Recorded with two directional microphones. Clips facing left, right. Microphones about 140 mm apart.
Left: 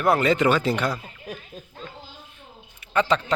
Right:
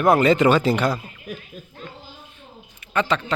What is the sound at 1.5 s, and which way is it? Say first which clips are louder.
Children playing: right 1 dB; 35° left (ahead or behind).